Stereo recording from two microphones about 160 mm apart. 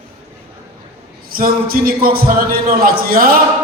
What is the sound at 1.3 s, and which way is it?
A man's voice, 65° right (ahead or behind).